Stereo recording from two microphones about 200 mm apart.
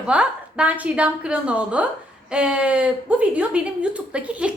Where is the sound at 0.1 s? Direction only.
5° right (ahead or behind).